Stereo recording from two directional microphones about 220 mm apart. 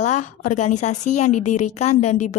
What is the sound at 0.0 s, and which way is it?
A woman's voice, 35° left (ahead or behind).